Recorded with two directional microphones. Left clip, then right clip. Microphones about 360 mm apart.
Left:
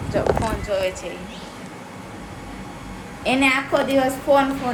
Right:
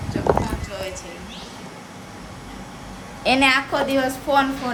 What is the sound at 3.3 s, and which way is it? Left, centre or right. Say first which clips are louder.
Speech: right 1 dB; centre.